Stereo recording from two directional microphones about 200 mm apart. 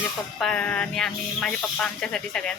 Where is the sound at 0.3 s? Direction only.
5° left (ahead or behind).